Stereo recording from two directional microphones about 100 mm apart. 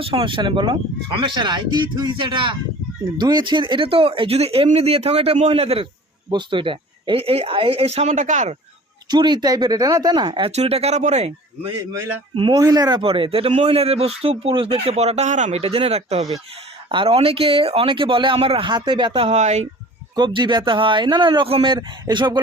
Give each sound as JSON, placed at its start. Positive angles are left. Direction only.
{"t": 0.0, "sound": "speech", "side_deg": -60}
{"t": 6.3, "sound": "speech", "side_deg": -55}
{"t": 9.0, "sound": "speech", "side_deg": -45}
{"t": 10.5, "sound": "speech", "side_deg": -90}
{"t": 12.3, "sound": "speech", "side_deg": -65}
{"t": 12.5, "sound": "speech", "side_deg": -40}
{"t": 13.0, "sound": "speech", "side_deg": -60}
{"t": 16.9, "sound": "speech", "side_deg": -70}
{"t": 19.1, "sound": "speech", "side_deg": -75}
{"t": 20.1, "sound": "speech", "side_deg": -50}
{"t": 21.4, "sound": "speech", "side_deg": -65}